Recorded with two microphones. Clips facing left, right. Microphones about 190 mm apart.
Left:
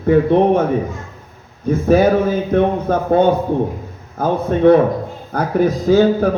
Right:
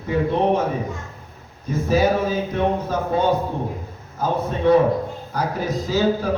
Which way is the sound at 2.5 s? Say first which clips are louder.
Left 6 dB; 55° left (ahead or behind).